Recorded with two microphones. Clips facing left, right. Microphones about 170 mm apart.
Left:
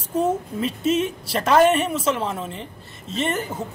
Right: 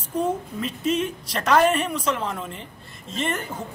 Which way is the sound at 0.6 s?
5° left (ahead or behind).